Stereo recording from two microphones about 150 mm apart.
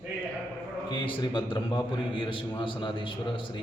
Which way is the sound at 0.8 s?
30° left (ahead or behind).